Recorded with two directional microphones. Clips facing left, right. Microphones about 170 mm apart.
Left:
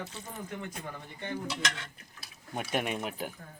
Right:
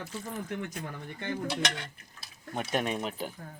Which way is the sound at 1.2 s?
70° right (ahead or behind).